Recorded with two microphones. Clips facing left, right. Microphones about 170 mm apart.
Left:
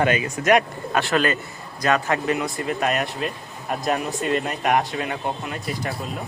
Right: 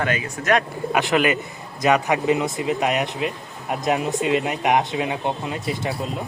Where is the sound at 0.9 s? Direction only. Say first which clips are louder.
Right 1 dB; 15° right (ahead or behind).